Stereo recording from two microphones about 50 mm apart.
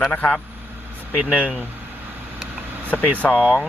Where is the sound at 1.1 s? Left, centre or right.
Right.